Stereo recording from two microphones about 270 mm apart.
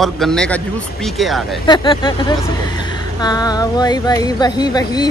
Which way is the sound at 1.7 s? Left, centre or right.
Centre.